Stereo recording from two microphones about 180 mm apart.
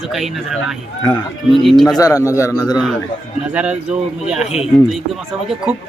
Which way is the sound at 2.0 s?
20° left (ahead or behind).